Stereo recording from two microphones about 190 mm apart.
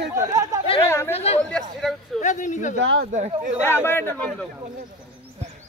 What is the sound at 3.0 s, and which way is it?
Speech, 35° right (ahead or behind).